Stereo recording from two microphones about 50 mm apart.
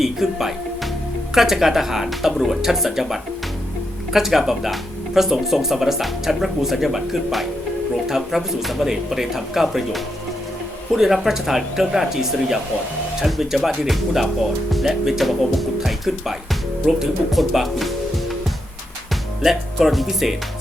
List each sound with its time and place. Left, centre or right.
0.0 s speech: centre
17.3 s music: centre
19.4 s speech: centre